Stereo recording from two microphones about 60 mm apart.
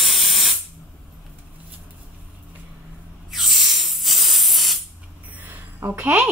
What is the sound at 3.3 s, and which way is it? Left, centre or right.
Spray, centre.